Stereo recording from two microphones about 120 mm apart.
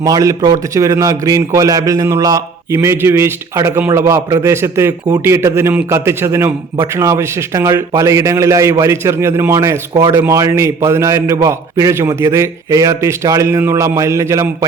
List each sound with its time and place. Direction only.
0.0 s a man's voice: 30° right (ahead or behind)